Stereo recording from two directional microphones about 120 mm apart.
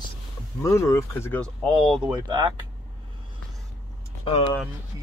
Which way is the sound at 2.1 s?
40° right (ahead or behind).